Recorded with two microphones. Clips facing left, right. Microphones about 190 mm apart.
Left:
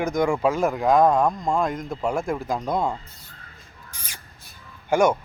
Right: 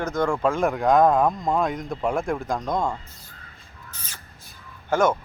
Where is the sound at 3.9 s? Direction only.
10° left (ahead or behind).